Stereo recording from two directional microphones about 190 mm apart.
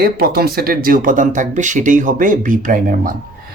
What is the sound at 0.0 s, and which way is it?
Speech, 50° right (ahead or behind).